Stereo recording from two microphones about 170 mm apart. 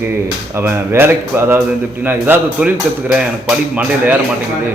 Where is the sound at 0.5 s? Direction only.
15° right (ahead or behind).